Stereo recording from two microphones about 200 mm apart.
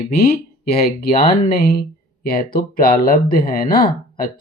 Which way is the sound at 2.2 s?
45° left (ahead or behind).